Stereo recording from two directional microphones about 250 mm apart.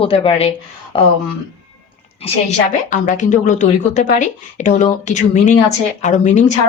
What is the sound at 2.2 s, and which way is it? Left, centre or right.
A woman's voice, left.